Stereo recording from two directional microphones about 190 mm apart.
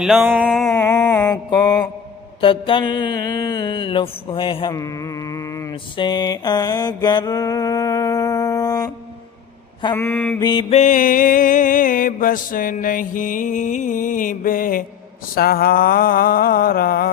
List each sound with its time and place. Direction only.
0.0 s a sound: centre (ahead or behind)
0.8 s mantra: 15° left (ahead or behind)
1.5 s mantra: 20° left (ahead or behind)
9.9 s mantra: 10° left (ahead or behind)
10.4 s mantra: 25° left (ahead or behind); by 17.1 s 50° left (ahead or behind)